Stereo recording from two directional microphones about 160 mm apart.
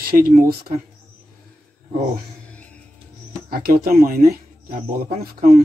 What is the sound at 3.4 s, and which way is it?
Speech, 65° right (ahead or behind).